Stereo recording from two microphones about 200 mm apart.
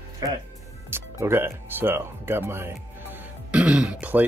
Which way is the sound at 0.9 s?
10° right (ahead or behind).